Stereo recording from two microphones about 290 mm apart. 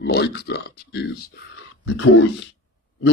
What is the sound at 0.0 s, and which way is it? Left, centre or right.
Speech, left.